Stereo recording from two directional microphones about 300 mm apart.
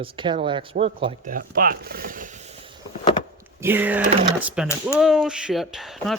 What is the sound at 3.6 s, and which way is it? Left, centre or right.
Speech, centre.